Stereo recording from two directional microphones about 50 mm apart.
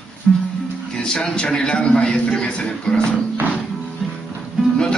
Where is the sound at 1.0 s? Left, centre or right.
Centre.